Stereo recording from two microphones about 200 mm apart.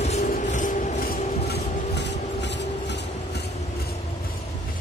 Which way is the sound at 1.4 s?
55° left (ahead or behind).